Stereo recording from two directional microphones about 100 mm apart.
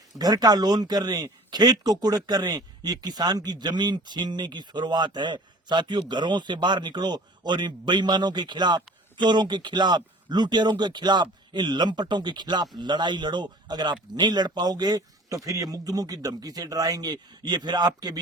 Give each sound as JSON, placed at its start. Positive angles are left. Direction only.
{"t": 0.2, "sound": "a man's voice", "side_deg": -40}